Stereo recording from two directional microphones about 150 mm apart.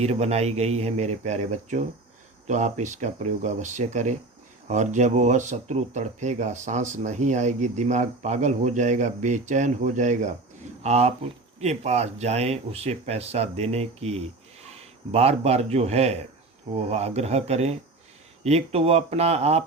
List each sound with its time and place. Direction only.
0.0 s a man's voice: 45° right (ahead or behind)